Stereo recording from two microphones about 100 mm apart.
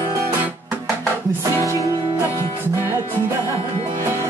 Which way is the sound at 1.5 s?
30° right (ahead or behind).